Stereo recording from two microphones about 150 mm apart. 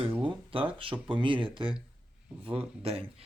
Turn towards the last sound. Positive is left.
turn(degrees=-40)  # may be behind; listen again after turning